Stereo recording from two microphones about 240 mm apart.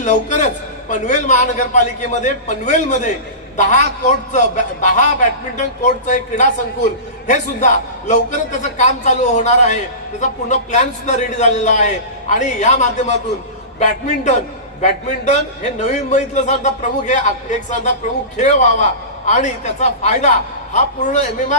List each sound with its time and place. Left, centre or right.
0.0 s a man's voice: left